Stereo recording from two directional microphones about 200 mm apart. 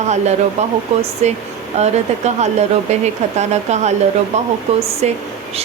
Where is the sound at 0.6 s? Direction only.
35° right (ahead or behind).